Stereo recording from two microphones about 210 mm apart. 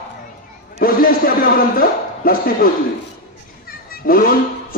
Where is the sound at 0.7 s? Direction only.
45° left (ahead or behind).